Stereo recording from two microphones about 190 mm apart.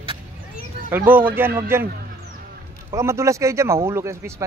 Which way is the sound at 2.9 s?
15° right (ahead or behind).